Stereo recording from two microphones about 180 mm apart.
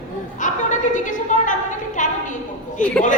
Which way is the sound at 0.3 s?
45° left (ahead or behind).